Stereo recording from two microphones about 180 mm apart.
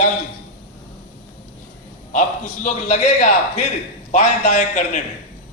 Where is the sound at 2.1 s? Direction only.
45° left (ahead or behind).